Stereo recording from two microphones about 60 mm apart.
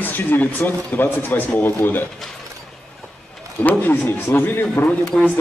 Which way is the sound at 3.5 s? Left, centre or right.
Left.